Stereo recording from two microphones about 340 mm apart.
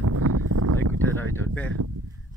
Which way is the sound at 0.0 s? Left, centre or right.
Right.